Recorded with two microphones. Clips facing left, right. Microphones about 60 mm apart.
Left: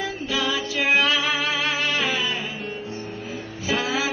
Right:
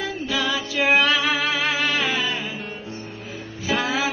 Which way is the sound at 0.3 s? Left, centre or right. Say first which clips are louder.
Even; centre.